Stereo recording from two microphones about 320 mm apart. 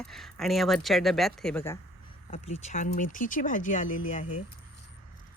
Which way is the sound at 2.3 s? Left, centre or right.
Centre.